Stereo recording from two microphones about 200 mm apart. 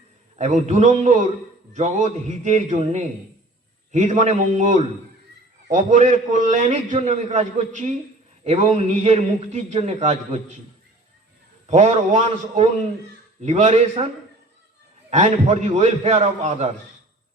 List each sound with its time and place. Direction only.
0.3 s a man's voice: 35° right (ahead or behind)
11.7 s a man's voice: 35° right (ahead or behind)
15.1 s a man's voice: 35° right (ahead or behind)